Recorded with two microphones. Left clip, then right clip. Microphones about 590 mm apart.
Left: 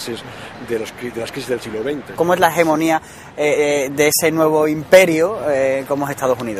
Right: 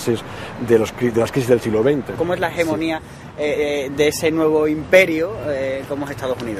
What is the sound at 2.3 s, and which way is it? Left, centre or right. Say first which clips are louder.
A man's voice: left 7 dB; left.